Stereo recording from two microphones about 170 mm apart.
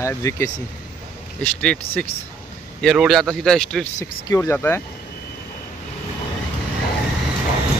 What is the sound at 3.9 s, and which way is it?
Speech, 20° left (ahead or behind).